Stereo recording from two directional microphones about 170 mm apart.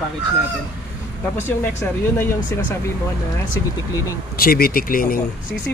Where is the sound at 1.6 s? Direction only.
15° left (ahead or behind).